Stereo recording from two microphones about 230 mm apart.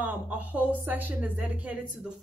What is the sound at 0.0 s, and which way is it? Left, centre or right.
A woman's voice, centre.